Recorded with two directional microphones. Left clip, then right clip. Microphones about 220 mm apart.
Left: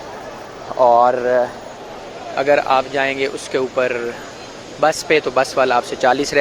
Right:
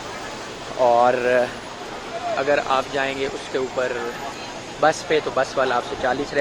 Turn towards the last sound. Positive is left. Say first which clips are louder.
# left 6 dB
turn(degrees=30)  # may be behind; listen again after turning